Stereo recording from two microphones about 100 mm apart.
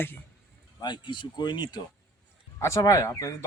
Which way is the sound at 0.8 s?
45° left (ahead or behind).